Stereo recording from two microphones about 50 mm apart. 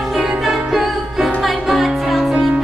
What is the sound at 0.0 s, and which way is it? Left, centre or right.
Music, centre.